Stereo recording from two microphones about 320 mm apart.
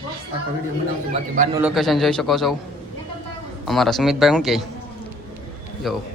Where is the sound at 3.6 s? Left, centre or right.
Centre.